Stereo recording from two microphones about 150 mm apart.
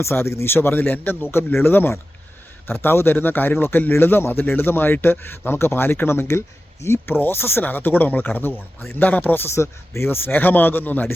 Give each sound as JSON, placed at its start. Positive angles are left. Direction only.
{"t": 0.0, "sound": "a man's voice", "side_deg": 15}